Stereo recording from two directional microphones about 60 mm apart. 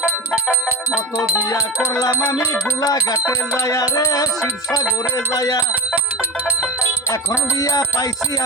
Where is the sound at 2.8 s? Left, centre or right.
Left.